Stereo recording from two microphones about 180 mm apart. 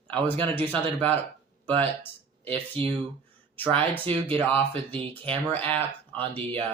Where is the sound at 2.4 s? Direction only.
30° right (ahead or behind).